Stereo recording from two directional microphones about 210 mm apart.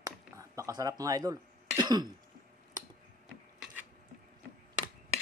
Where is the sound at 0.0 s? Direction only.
15° right (ahead or behind).